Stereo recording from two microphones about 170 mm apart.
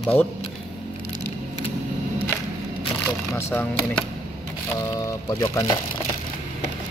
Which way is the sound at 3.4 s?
15° left (ahead or behind).